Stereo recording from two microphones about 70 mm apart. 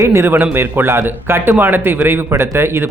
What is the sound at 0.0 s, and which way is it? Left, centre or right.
A man's voice, right.